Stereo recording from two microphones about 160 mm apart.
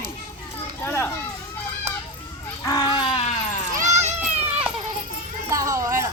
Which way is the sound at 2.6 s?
25° left (ahead or behind).